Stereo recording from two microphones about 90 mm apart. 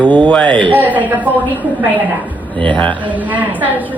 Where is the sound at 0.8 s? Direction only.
20° right (ahead or behind).